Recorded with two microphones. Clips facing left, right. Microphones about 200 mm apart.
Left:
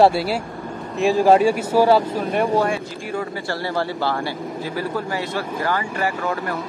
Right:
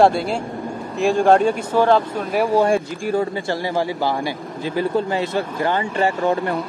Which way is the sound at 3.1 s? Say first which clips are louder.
Right 4 dB; 20° right (ahead or behind).